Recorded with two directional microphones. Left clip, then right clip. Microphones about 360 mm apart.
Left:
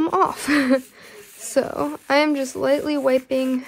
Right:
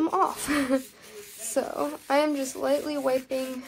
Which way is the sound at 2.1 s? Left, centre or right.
Left.